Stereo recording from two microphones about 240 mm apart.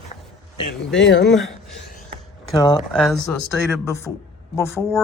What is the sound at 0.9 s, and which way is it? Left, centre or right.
Speech, left.